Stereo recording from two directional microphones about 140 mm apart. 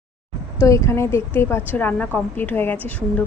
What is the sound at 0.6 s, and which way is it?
Speech, 20° left (ahead or behind).